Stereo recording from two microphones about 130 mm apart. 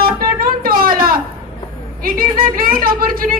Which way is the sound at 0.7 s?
90° right.